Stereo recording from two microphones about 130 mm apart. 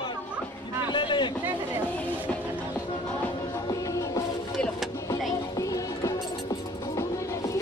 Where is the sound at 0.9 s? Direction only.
35° left (ahead or behind).